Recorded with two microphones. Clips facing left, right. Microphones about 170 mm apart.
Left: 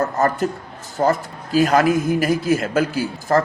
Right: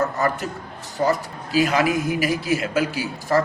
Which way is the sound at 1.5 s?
45° left (ahead or behind).